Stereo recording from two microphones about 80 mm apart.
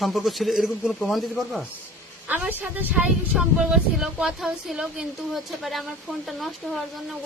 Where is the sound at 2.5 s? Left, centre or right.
Right.